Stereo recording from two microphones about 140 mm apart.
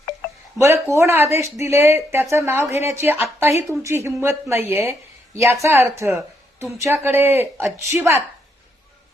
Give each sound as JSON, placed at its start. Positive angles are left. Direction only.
{"t": 0.6, "sound": "speech", "side_deg": -20}